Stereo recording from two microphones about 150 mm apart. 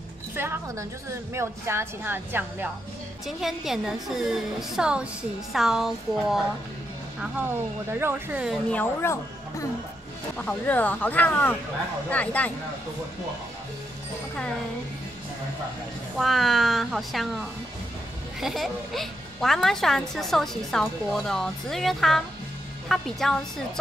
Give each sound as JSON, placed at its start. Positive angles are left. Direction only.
{"t": 0.4, "sound": "a woman's voice", "side_deg": -15}
{"t": 3.3, "sound": "a woman's voice", "side_deg": 0}
{"t": 8.5, "sound": "speech", "side_deg": 5}
{"t": 9.0, "sound": "speech", "side_deg": 20}
{"t": 16.2, "sound": "speech", "side_deg": 0}